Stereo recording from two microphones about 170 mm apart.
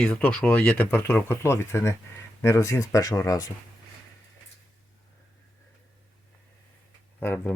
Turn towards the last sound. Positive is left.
turn(degrees=10)  # may be behind; listen again after turning